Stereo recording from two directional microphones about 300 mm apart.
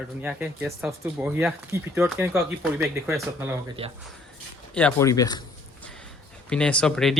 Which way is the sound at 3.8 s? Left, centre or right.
Centre.